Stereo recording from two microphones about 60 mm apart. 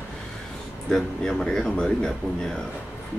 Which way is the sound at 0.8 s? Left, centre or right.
Centre.